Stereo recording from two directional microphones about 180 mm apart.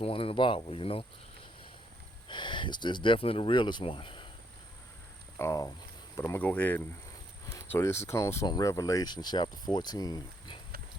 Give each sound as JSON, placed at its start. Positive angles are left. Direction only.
{"t": 0.0, "sound": "speech", "side_deg": 30}
{"t": 2.2, "sound": "speech", "side_deg": 25}
{"t": 5.4, "sound": "speech", "side_deg": 15}